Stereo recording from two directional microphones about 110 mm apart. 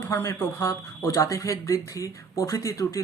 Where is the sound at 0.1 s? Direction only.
25° left (ahead or behind).